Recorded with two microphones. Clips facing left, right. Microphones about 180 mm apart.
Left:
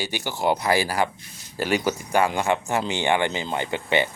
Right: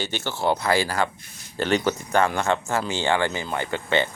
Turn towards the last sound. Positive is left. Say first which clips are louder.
# even
turn(degrees=15)  # may be behind; listen again after turning